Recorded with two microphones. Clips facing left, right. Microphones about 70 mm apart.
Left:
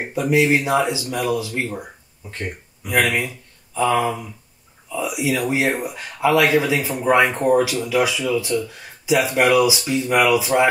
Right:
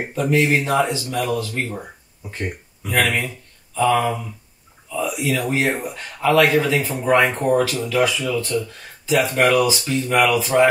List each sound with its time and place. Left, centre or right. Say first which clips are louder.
0.1 s speech: left 1 dB; centre
2.2 s speech: right 1 dB; centre
2.8 s speech: left 1 dB; centre